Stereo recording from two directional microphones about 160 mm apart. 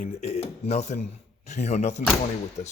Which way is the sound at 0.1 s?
40° left (ahead or behind).